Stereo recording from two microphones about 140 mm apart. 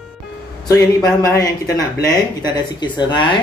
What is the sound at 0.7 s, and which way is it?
Speech, 25° left (ahead or behind).